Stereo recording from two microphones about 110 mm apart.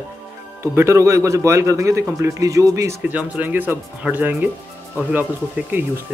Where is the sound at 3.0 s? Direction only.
15° right (ahead or behind).